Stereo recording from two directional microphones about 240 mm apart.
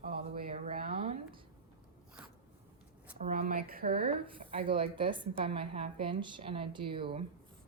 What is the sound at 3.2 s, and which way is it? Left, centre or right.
Speech, right.